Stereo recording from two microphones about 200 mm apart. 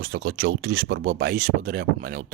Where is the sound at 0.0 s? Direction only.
50° right (ahead or behind).